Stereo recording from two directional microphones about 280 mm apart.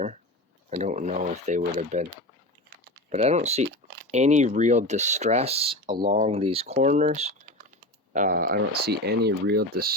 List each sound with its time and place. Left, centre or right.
0.7 s speech: right
3.1 s speech: right